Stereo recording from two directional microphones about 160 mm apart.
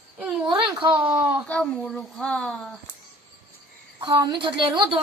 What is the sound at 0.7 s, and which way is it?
Speech, 30° right (ahead or behind).